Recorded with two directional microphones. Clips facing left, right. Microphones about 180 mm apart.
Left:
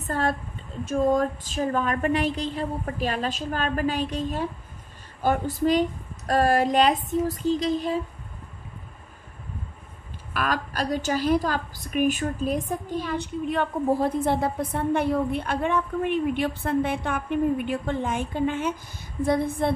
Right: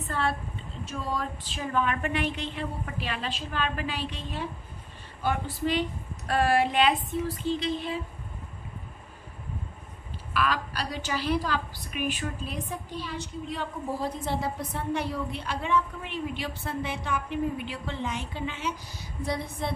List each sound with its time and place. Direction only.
0.0 s a woman's voice: 45° left (ahead or behind)
10.3 s a woman's voice: 45° left (ahead or behind)